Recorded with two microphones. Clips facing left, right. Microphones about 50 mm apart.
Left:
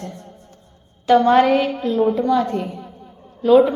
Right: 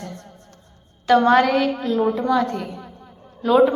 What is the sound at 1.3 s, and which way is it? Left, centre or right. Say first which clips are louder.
Speech: left 2 dB; centre.